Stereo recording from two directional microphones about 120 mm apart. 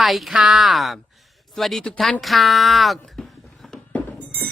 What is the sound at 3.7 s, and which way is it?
Music, 10° left (ahead or behind).